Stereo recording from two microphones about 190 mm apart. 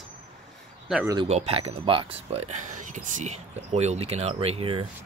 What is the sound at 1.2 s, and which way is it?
Speech, 35° right (ahead or behind).